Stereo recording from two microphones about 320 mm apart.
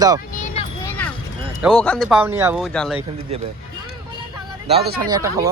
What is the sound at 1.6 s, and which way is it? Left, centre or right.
Speech, centre.